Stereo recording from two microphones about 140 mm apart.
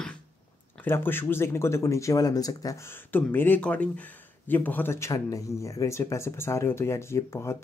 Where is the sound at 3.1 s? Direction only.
15° left (ahead or behind).